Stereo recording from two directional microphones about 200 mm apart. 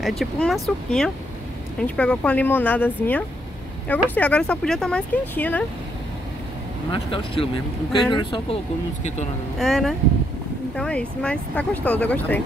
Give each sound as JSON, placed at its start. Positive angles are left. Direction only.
{"t": 0.0, "sound": "speech", "side_deg": 0}
{"t": 6.9, "sound": "speech", "side_deg": 25}
{"t": 9.6, "sound": "speech", "side_deg": 0}